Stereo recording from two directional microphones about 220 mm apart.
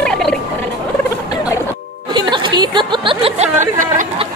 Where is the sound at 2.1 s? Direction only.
20° right (ahead or behind).